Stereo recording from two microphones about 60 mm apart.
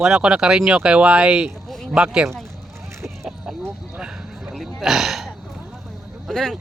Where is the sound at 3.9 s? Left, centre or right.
Centre.